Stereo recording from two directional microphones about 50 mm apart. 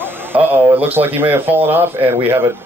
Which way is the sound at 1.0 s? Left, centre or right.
Right.